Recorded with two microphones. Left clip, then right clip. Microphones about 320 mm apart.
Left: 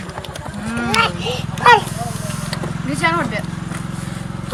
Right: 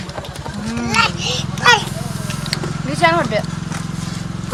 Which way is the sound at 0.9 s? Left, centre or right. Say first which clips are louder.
Right 2 dB; left.